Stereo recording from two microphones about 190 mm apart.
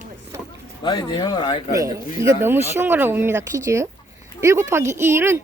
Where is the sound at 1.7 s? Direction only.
15° right (ahead or behind).